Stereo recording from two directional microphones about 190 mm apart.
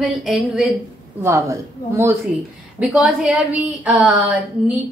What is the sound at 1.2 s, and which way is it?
Speech, 15° right (ahead or behind).